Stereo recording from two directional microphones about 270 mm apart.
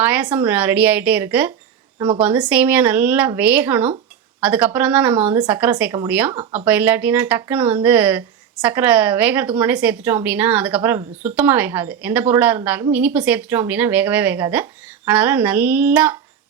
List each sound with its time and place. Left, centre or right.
0.0 s speech: centre
2.0 s speech: centre
2.2 s speech: centre